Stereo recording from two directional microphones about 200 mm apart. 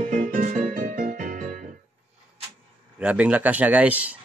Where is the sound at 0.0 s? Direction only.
45° right (ahead or behind).